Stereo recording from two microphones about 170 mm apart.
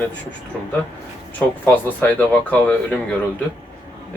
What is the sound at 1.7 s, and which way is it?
Speech, 10° left (ahead or behind).